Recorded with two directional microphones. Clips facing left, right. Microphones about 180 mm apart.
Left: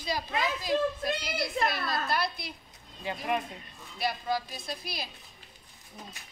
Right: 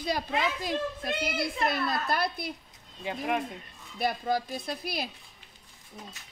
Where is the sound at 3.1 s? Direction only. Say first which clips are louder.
Right 1 dB; 10° right (ahead or behind).